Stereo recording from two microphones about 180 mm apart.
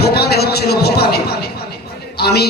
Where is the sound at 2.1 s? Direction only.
65° left (ahead or behind).